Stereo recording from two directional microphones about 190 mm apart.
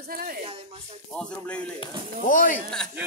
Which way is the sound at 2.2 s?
45° left (ahead or behind).